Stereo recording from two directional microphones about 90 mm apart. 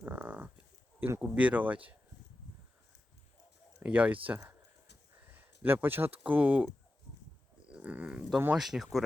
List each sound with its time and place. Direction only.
0.0 s livestock: 20° right (ahead or behind)
0.9 s speech: 25° right (ahead or behind)
1.2 s speech: 15° right (ahead or behind)
3.8 s speech: 15° right (ahead or behind)
5.3 s a sound: 20° right (ahead or behind)
6.2 s speech: 15° right (ahead or behind)
7.7 s speech: 15° right (ahead or behind)
8.5 s speech: 5° right (ahead or behind)